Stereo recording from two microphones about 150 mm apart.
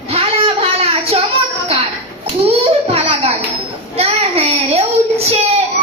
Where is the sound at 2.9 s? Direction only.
40° right (ahead or behind).